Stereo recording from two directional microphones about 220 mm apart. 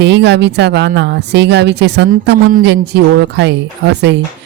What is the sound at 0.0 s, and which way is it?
Speech, 50° right (ahead or behind).